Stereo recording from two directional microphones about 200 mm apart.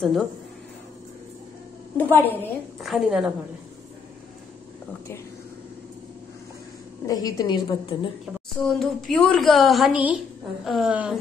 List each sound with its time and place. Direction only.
0.0 s a woman's voice: centre (ahead or behind)
2.0 s a woman's voice: 10° left (ahead or behind)
2.8 s a woman's voice: centre (ahead or behind)
7.1 s a woman's voice: 20° left (ahead or behind)
8.5 s a woman's voice: centre (ahead or behind)